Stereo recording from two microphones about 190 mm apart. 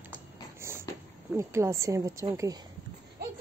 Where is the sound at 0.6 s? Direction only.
15° right (ahead or behind).